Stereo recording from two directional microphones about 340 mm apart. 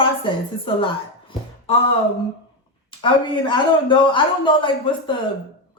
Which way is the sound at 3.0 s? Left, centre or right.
Centre.